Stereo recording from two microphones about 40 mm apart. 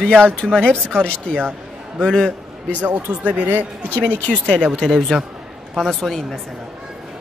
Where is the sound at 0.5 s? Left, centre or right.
Left.